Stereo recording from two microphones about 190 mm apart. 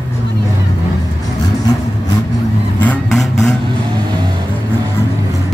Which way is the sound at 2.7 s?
5° left (ahead or behind).